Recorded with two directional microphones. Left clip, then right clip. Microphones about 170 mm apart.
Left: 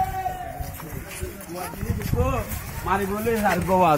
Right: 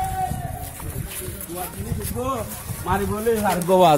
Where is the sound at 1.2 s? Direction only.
Centre (ahead or behind).